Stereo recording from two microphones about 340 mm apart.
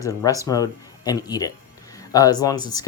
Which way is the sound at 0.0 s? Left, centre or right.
Centre.